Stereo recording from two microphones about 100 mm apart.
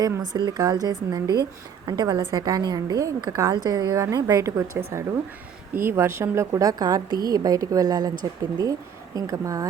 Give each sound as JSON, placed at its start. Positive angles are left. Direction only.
{"t": 0.3, "sound": "a woman's voice", "side_deg": -45}